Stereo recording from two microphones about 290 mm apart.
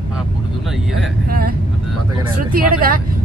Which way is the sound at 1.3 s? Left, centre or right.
Right.